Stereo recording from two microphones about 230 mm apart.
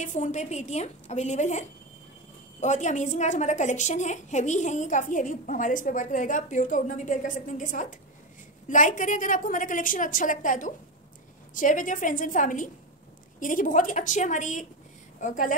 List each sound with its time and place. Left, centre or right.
0.0 s a woman's voice: left